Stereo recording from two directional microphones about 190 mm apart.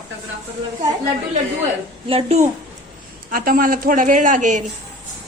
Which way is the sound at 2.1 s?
30° right (ahead or behind).